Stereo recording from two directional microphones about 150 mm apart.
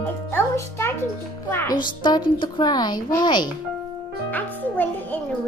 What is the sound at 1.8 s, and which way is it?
A woman's voice, 30° left (ahead or behind).